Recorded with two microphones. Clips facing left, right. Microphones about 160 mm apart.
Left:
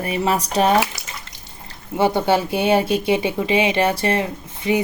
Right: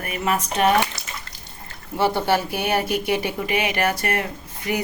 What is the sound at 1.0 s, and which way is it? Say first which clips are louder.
Bathtub: even; 20° right (ahead or behind).